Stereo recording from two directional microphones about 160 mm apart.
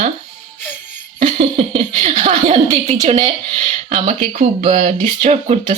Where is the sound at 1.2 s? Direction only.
40° right (ahead or behind).